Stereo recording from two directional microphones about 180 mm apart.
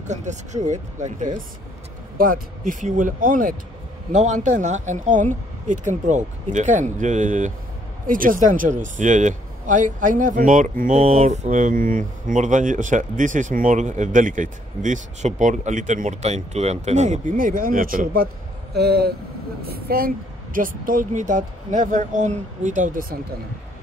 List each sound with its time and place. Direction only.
0.1 s a man's voice: 40° right (ahead or behind)